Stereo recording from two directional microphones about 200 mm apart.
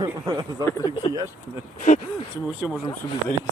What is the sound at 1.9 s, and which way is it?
Speech, 40° left (ahead or behind).